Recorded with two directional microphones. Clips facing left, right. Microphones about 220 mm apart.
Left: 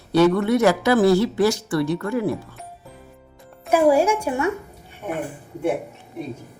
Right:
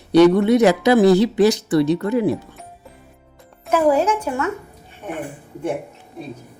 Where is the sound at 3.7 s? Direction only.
10° left (ahead or behind).